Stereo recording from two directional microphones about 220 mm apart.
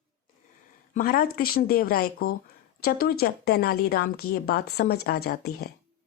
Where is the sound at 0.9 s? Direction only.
40° left (ahead or behind).